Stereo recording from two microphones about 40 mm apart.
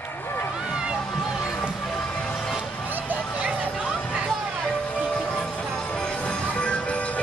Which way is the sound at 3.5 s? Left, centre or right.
Right.